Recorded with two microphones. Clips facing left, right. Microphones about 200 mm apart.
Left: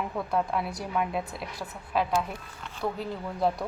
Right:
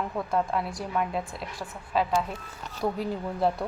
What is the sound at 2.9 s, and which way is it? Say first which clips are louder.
Speech: right 3 dB; centre (ahead or behind).